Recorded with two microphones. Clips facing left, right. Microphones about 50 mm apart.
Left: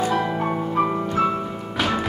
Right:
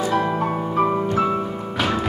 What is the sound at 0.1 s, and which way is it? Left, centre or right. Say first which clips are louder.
Music: right 2 dB; centre.